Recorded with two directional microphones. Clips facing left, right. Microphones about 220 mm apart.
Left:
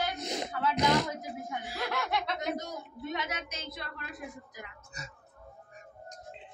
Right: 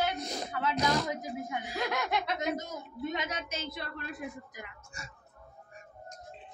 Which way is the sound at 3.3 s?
30° right (ahead or behind).